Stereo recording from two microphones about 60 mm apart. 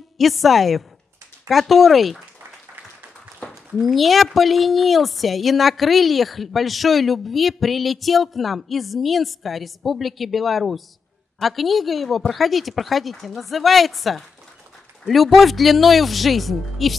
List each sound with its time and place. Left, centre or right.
0.2 s a woman's voice: centre
3.4 s a sound: centre
3.8 s a woman's voice: centre